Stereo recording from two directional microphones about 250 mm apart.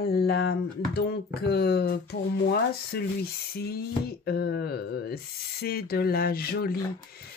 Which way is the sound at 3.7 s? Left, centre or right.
Left.